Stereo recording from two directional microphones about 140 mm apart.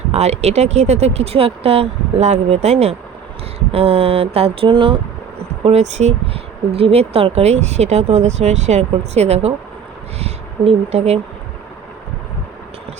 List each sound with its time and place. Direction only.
0.1 s speech: 50° right (ahead or behind)
5.6 s speech: 55° right (ahead or behind)